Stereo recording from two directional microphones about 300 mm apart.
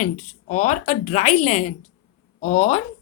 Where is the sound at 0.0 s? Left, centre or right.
Left.